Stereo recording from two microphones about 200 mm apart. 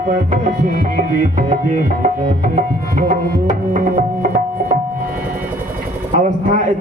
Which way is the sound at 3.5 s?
40° right (ahead or behind).